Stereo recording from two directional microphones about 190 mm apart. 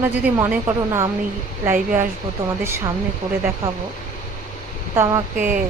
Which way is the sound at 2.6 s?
15° right (ahead or behind).